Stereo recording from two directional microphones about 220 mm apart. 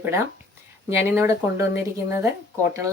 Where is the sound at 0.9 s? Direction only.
10° right (ahead or behind).